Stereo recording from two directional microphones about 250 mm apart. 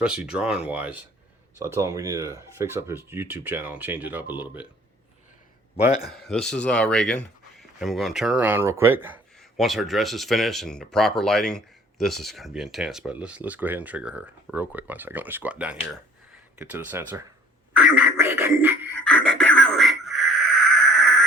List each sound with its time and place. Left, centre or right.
0.0 s speech: centre
5.7 s a man's voice: left
6.1 s speech: centre
17.8 s music: centre
19.0 s a sound: centre